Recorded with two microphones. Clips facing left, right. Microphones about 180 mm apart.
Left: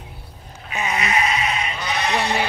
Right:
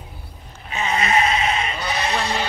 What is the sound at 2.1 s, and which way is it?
Speech, 15° left (ahead or behind).